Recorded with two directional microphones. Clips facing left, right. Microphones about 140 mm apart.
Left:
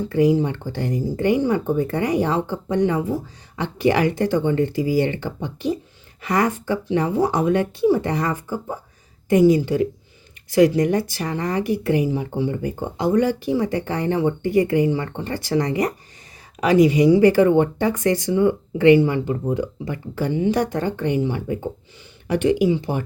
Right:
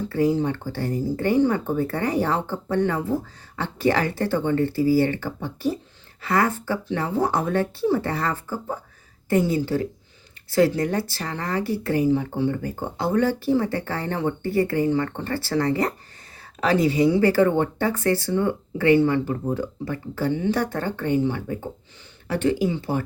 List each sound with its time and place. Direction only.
0.1 s speech: 15° left (ahead or behind)